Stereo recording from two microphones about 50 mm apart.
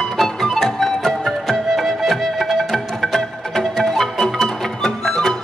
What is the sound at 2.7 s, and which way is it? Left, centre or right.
Music, centre.